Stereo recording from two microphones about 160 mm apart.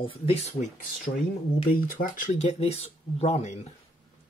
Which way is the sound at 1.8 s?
60° left (ahead or behind).